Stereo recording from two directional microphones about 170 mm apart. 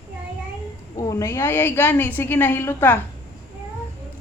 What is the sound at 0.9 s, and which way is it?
A woman's voice, 20° left (ahead or behind).